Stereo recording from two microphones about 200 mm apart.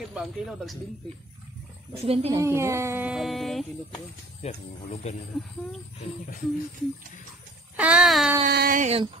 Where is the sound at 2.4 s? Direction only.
15° right (ahead or behind).